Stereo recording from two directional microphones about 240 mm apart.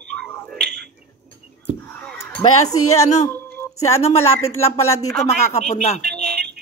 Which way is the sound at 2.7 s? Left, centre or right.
Left.